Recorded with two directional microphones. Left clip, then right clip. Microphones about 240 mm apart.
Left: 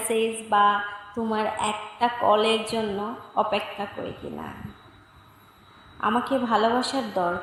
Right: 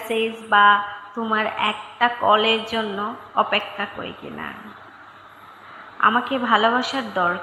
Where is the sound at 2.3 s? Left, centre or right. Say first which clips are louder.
Right 4 dB; centre.